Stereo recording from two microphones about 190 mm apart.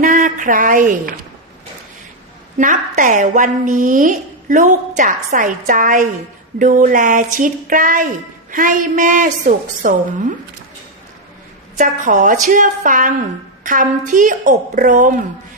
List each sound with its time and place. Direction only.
0.0 s a sound: 45° right (ahead or behind)
2.6 s a woman's voice: 40° right (ahead or behind)
11.8 s a woman's voice: 40° right (ahead or behind)